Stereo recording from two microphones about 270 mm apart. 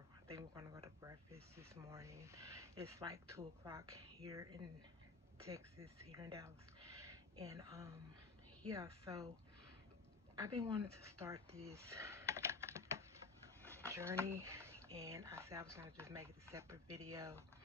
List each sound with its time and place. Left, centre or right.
0.3 s speech: centre
10.4 s speech: centre
13.6 s a sound: centre
13.8 s speech: centre